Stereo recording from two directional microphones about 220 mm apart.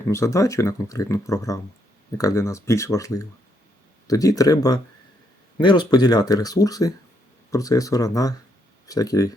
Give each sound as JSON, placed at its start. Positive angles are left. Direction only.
{"t": 0.1, "sound": "speech", "side_deg": 15}